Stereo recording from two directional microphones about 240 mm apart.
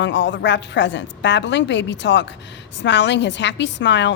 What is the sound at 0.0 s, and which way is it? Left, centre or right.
A woman's voice, left.